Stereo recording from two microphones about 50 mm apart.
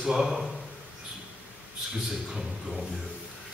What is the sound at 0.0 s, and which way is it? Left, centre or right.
Speech, centre.